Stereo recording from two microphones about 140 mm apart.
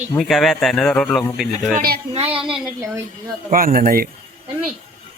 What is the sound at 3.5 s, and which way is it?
Speech, 85° right.